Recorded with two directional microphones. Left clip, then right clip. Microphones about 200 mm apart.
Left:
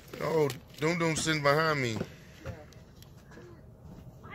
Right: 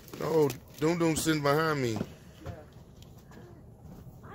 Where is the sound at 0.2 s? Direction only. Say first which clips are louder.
Right 2 dB; 20° right (ahead or behind).